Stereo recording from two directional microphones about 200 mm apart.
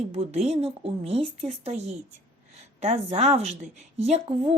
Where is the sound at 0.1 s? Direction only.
30° right (ahead or behind).